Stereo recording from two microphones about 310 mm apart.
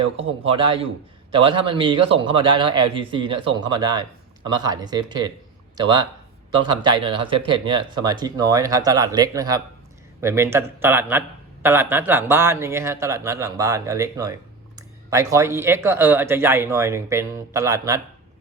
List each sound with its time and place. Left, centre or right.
0.4 s speech: centre